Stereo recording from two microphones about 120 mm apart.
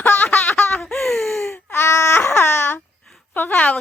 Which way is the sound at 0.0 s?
15° left (ahead or behind).